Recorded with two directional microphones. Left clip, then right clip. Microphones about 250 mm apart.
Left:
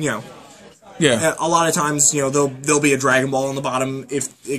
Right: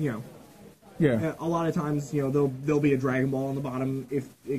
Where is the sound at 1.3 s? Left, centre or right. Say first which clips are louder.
Left 12 dB; left.